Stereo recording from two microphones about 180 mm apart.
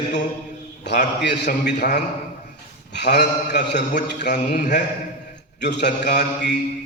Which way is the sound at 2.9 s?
70° left (ahead or behind).